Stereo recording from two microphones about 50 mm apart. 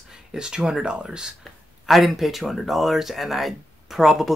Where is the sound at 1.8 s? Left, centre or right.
Centre.